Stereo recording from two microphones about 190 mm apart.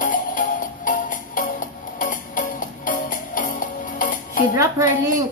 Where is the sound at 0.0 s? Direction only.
45° left (ahead or behind).